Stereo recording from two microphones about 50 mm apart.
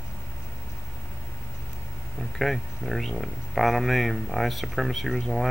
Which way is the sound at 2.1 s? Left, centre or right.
Centre.